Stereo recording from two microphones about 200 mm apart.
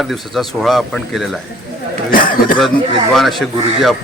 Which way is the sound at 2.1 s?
45° left (ahead or behind).